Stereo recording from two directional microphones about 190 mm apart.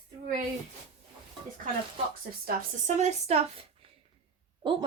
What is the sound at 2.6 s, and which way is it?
Speech, 40° right (ahead or behind).